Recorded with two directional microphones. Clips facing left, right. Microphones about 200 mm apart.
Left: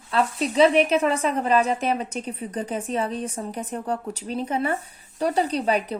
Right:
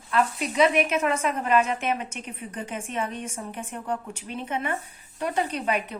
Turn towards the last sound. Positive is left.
turn(degrees=35)  # may be behind; listen again after turning